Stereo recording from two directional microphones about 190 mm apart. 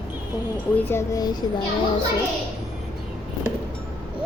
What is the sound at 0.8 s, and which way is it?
Speech, 10° left (ahead or behind).